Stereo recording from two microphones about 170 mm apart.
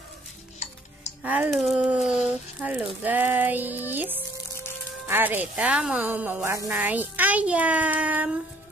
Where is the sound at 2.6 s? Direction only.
5° right (ahead or behind).